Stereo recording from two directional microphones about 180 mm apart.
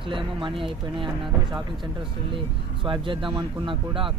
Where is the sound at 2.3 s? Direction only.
30° right (ahead or behind).